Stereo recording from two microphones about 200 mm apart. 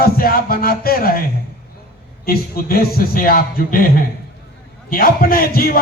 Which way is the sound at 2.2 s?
50° left (ahead or behind).